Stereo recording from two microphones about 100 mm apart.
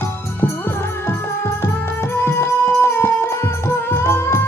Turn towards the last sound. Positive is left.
turn(degrees=25)  # may be behind; listen again after turning